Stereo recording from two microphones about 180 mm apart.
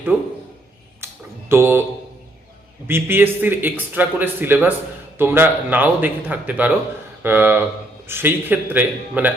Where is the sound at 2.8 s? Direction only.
10° right (ahead or behind).